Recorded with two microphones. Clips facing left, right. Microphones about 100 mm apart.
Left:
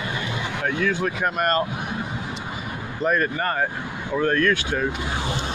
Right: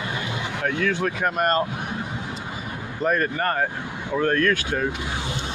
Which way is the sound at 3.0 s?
45° right (ahead or behind).